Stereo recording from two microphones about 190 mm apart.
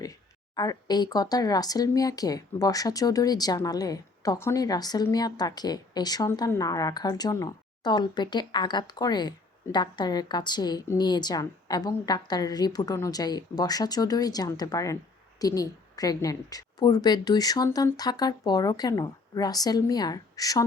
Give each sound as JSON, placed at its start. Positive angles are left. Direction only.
{"t": 0.5, "sound": "speech", "side_deg": 20}